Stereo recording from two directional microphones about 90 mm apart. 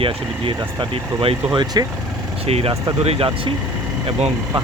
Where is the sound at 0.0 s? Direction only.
90° right.